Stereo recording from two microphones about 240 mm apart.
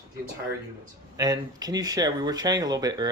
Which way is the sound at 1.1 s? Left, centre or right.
Centre.